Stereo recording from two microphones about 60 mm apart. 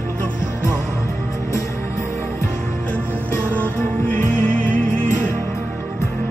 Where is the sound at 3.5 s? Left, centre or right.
Left.